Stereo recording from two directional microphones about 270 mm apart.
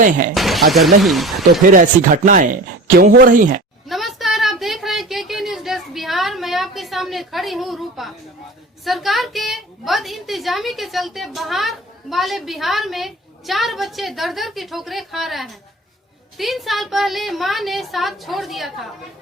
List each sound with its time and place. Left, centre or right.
0.3 s a woman's voice: centre
1.6 s speech: right
3.8 s a sound: centre
8.8 s a woman's voice: centre